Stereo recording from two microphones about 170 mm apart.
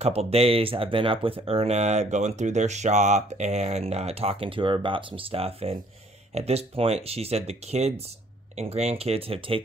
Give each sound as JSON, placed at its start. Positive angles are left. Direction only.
{"t": 0.0, "sound": "speech", "side_deg": -35}